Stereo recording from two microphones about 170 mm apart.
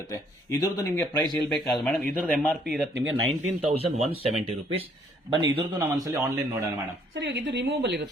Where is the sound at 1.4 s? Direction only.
5° left (ahead or behind).